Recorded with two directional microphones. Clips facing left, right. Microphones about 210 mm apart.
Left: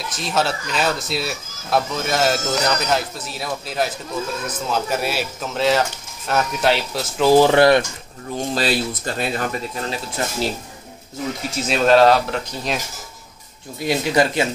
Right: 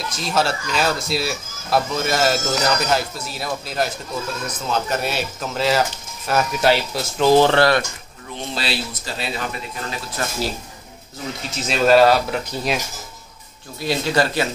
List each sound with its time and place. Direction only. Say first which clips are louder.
0.1 s speech: even; centre (ahead or behind); by 7.8 s 15° left (ahead or behind)
8.5 s speech: left 5 dB; 50° left (ahead or behind)
9.8 s speech: left 2 dB; 25° left (ahead or behind)
11.7 s speech: even; 5° right (ahead or behind)
13.7 s speech: left 2 dB; 20° left (ahead or behind)